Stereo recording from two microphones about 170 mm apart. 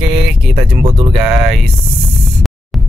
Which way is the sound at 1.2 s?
Centre (ahead or behind).